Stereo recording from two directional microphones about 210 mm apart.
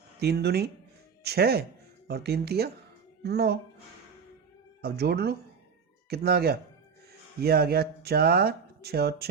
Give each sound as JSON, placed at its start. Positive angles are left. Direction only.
{"t": 0.2, "sound": "speech", "side_deg": -50}
{"t": 4.8, "sound": "speech", "side_deg": -50}